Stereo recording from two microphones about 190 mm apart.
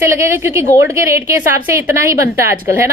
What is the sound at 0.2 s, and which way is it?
A woman's voice, 15° right (ahead or behind).